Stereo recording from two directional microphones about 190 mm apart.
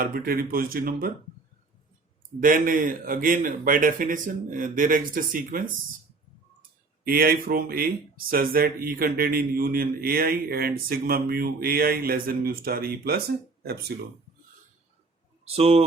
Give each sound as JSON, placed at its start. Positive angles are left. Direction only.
{"t": 0.0, "sound": "speech", "side_deg": -50}
{"t": 2.4, "sound": "speech", "side_deg": -45}
{"t": 15.4, "sound": "speech", "side_deg": -30}